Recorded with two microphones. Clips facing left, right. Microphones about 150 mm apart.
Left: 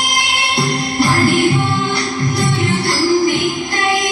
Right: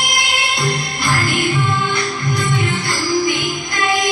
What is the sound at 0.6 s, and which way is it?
Music, 35° left (ahead or behind).